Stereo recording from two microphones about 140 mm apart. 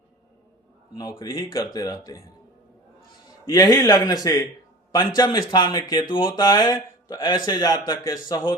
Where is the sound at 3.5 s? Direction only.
30° left (ahead or behind).